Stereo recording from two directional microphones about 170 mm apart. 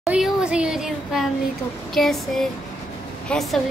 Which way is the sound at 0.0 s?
5° right (ahead or behind).